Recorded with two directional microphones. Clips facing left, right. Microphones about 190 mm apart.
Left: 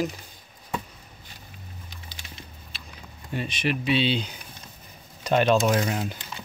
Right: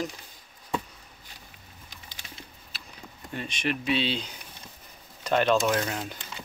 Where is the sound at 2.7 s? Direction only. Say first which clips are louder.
Left 1 dB; 5° right (ahead or behind).